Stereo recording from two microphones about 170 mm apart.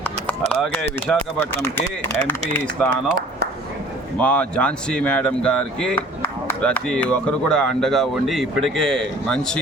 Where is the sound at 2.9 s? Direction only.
75° right (ahead or behind).